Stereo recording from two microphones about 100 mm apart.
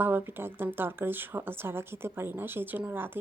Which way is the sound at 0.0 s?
20° right (ahead or behind).